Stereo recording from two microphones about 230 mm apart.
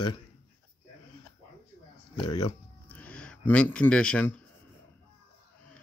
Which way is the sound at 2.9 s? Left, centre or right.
Centre.